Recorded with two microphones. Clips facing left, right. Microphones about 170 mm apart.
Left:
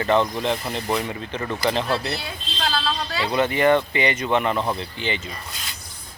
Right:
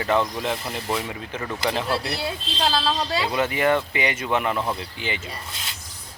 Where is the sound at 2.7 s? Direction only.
35° right (ahead or behind).